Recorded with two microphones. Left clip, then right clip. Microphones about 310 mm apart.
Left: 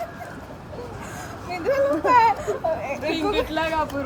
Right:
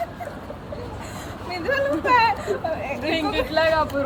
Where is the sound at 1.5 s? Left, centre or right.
Centre.